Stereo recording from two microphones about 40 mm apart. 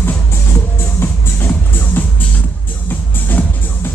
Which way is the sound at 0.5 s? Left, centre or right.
Left.